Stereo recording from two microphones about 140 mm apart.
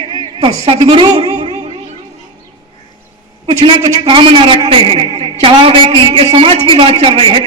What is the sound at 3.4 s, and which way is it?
A man's voice, 40° right (ahead or behind).